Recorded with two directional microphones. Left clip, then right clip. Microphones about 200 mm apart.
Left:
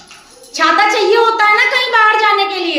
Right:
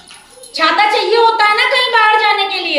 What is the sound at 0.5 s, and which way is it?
A woman's voice, 15° left (ahead or behind).